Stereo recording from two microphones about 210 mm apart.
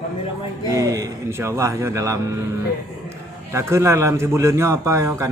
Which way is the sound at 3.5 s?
15° right (ahead or behind).